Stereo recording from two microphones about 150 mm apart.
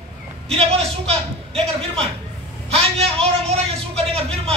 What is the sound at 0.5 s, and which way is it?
A man's voice, 40° right (ahead or behind).